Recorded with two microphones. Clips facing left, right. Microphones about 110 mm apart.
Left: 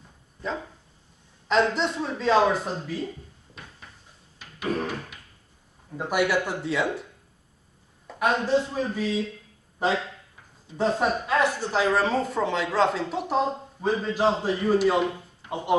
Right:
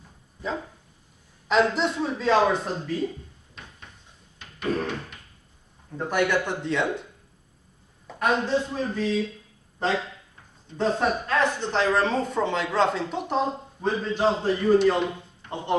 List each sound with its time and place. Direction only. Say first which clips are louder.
1.5 s speech: right 1 dB; centre (ahead or behind)
4.4 s a sound: right 1 dB; 5° left (ahead or behind)
5.9 s a man's voice: even; 5° left (ahead or behind)
8.1 s a man's voice: left 1 dB; 10° left (ahead or behind)